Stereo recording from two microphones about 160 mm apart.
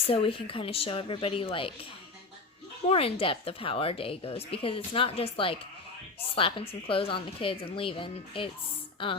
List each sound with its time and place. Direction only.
0.1 s a woman's voice: 35° left (ahead or behind)